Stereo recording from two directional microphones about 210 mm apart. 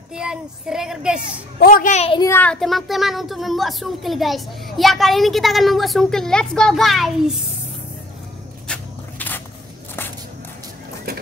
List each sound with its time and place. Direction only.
0.1 s a child's voice: 5° right (ahead or behind)
1.6 s a child's voice: 40° left (ahead or behind)
2.1 s a child's voice: 10° left (ahead or behind)
8.7 s a sound: 5° left (ahead or behind)